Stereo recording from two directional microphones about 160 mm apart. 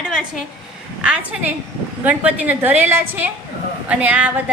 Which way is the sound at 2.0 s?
10° right (ahead or behind).